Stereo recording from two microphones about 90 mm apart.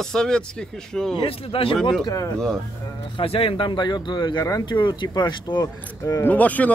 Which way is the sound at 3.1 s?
90° left.